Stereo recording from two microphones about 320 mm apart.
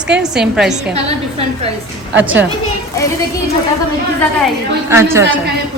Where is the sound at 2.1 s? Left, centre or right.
Centre.